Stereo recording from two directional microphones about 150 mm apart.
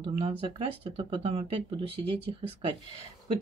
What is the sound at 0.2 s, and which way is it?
Speech, 40° right (ahead or behind).